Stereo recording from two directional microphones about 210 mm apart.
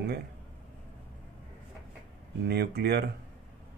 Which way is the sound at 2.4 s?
50° right (ahead or behind).